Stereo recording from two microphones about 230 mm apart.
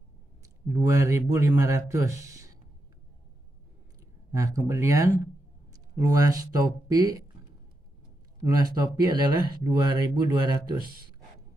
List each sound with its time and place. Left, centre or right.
0.4 s speech: centre
4.3 s speech: centre
8.5 s speech: centre